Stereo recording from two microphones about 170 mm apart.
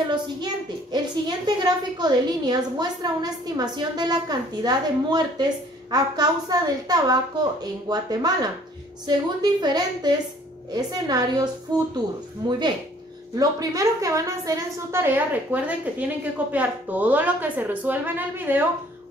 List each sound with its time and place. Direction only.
0.9 s a woman's voice: 25° right (ahead or behind)